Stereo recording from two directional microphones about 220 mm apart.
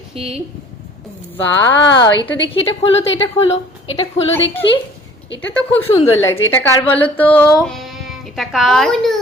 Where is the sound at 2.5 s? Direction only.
30° left (ahead or behind).